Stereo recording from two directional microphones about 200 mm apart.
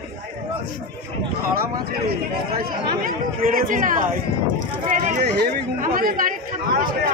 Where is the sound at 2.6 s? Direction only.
45° right (ahead or behind).